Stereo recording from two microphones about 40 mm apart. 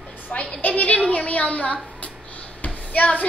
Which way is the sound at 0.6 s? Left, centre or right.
Left.